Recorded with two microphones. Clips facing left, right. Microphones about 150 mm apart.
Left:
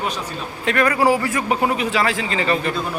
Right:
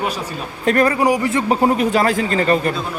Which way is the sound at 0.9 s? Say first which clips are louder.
Right 1 dB; 20° right (ahead or behind).